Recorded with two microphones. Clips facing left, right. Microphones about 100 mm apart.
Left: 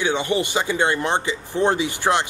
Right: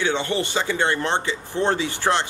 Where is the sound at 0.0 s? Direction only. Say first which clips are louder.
Left 2 dB; 15° left (ahead or behind).